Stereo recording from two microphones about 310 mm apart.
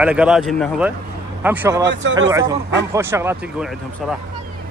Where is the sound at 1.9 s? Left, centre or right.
Right.